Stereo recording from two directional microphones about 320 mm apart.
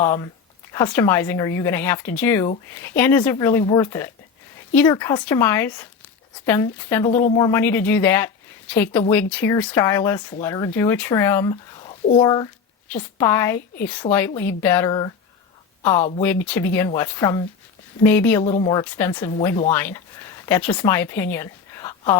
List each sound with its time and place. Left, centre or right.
0.0 s speech: centre
16.2 s speech: centre
18.4 s a woman's voice: centre